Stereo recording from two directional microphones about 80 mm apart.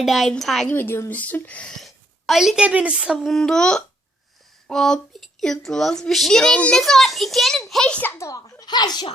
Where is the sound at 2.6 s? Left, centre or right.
Centre.